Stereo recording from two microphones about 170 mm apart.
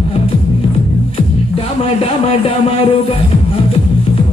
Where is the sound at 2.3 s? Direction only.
35° left (ahead or behind).